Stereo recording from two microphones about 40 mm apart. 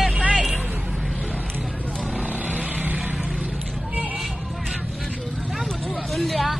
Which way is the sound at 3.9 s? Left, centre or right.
Right.